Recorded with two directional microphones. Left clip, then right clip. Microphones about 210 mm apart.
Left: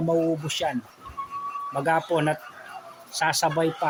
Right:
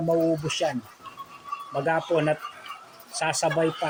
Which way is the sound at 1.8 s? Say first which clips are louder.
Even; 15° left (ahead or behind).